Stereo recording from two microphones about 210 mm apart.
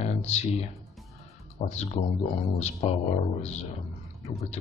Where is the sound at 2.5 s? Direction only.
30° left (ahead or behind).